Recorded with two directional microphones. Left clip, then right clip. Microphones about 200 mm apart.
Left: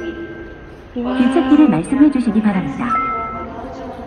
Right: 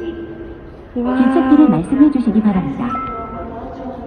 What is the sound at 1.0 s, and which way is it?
Speech, 5° left (ahead or behind).